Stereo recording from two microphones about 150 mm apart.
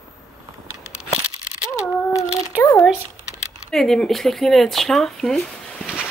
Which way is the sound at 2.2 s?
20° left (ahead or behind).